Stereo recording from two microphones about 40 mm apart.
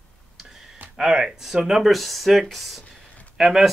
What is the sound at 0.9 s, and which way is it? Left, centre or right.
Speech, centre.